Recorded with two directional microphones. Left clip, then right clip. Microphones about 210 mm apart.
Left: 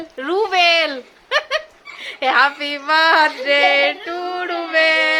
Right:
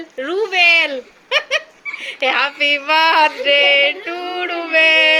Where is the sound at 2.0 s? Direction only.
20° left (ahead or behind).